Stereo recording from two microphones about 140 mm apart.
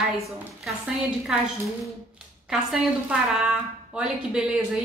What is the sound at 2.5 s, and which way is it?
A woman's voice, 5° right (ahead or behind).